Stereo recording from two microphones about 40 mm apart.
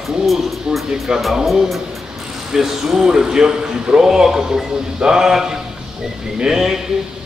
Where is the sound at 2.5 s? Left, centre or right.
Centre.